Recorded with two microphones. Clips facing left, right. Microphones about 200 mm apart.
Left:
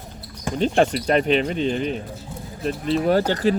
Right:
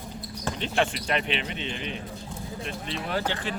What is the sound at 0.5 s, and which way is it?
Speech, 40° left (ahead or behind).